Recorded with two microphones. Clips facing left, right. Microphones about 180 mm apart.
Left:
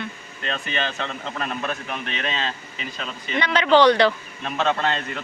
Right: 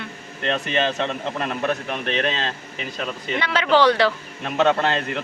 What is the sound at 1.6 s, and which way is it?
Speech, 60° right (ahead or behind).